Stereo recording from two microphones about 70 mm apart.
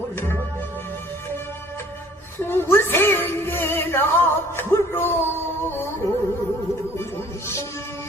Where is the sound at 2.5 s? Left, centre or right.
Left.